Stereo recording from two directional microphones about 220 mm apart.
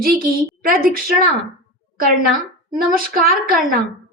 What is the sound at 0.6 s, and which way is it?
Speech, 40° right (ahead or behind).